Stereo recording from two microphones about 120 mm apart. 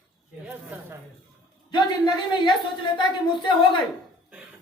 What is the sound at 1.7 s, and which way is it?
Speech, 40° left (ahead or behind).